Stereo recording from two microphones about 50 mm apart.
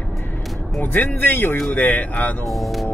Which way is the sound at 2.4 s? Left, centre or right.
Centre.